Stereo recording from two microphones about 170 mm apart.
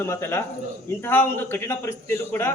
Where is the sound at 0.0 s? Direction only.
15° left (ahead or behind).